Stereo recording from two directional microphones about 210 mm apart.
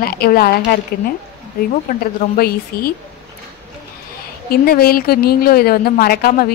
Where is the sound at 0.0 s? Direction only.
45° left (ahead or behind).